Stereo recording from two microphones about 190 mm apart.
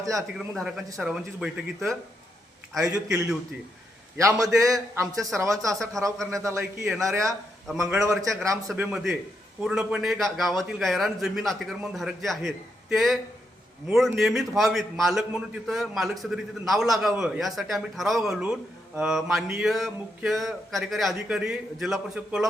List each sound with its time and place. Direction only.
0.0 s a man's voice: 15° right (ahead or behind)
0.3 s a man's voice: centre (ahead or behind)
4.2 s a man's voice: 15° right (ahead or behind)
6.0 s a man's voice: centre (ahead or behind)
6.3 s a man's voice: 15° right (ahead or behind)
8.7 s a man's voice: 5° right (ahead or behind)